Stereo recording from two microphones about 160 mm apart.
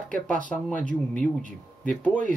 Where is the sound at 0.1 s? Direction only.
55° right (ahead or behind).